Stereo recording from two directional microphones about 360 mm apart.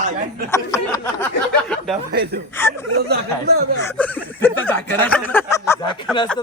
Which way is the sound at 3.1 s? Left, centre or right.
Right.